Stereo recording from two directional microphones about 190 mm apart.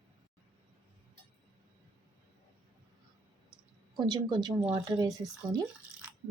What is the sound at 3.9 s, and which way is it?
A woman's voice, 20° right (ahead or behind).